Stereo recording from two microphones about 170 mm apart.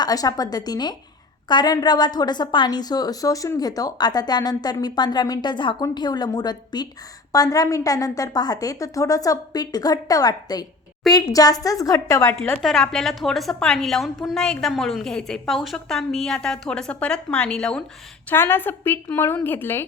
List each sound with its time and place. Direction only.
0.0 s a woman's voice: 20° left (ahead or behind)
12.6 s a woman's voice: 5° left (ahead or behind)